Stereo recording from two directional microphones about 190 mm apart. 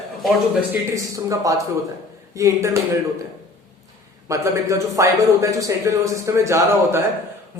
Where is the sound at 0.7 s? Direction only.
15° right (ahead or behind).